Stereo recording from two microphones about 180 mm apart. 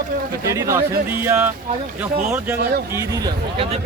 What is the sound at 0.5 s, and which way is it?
Speech, 15° right (ahead or behind).